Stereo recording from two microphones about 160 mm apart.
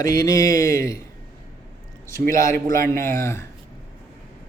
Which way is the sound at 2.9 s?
15° left (ahead or behind).